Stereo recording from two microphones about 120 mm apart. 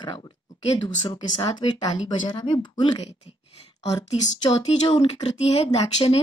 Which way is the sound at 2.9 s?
65° left (ahead or behind).